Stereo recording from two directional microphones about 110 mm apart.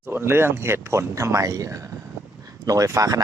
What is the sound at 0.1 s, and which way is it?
Speech, 20° right (ahead or behind).